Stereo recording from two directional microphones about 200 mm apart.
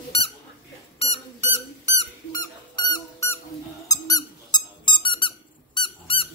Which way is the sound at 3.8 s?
20° left (ahead or behind).